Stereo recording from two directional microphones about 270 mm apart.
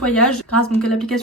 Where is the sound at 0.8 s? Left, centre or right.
Centre.